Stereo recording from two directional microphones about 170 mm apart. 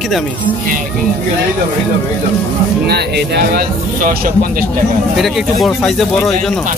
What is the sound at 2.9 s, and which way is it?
Speech, 75° right (ahead or behind).